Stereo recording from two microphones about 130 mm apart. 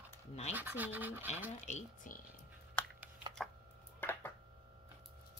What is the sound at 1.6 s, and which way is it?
Speech, 80° left.